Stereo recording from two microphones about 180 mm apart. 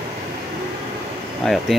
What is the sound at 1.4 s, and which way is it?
Speech, 5° left (ahead or behind).